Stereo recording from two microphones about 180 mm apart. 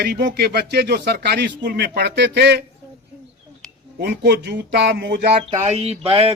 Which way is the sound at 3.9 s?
65° right (ahead or behind).